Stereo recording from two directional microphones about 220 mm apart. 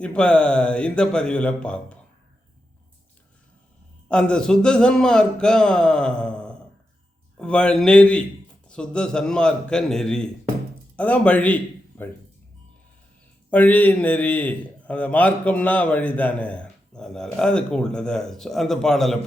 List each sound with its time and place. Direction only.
0.0 s a man's voice: 5° left (ahead or behind)
4.1 s a man's voice: 5° left (ahead or behind)
13.5 s a man's voice: 5° left (ahead or behind)